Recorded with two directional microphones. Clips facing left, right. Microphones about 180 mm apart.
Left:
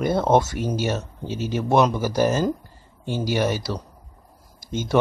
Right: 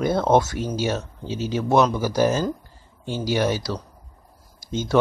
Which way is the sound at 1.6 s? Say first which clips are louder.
Even; 15° left (ahead or behind).